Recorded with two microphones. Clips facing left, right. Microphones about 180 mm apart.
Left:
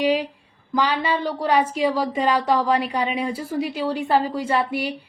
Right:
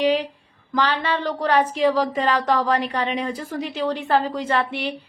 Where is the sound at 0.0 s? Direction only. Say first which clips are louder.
Right 1 dB; 10° left (ahead or behind).